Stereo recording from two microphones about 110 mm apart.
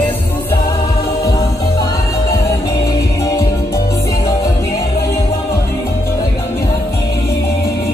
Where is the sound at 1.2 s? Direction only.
30° left (ahead or behind).